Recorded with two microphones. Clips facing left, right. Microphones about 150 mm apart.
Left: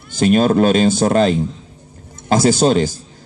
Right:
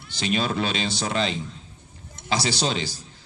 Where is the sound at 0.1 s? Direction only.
45° left (ahead or behind).